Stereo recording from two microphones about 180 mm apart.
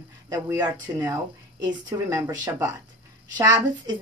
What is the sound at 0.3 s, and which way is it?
A woman's voice, 15° right (ahead or behind).